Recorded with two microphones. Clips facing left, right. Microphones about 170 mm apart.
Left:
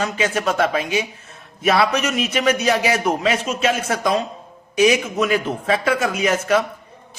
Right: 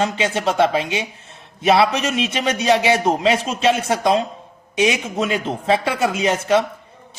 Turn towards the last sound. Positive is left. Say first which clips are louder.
# right 1 dB
turn(degrees=-30)  # may be behind; listen again after turning